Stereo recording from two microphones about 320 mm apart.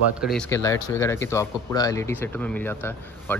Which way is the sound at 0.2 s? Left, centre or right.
Centre.